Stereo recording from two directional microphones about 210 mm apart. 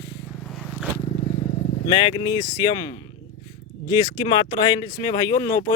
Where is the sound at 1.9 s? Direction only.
25° left (ahead or behind).